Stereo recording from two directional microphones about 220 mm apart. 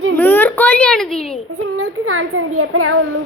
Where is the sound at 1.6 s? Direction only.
75° right (ahead or behind).